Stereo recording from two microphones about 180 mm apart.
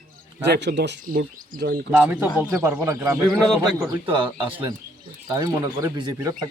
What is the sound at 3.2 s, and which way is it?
Speech, centre (ahead or behind).